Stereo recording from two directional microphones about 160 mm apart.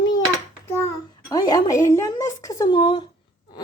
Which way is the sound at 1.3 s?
25° left (ahead or behind).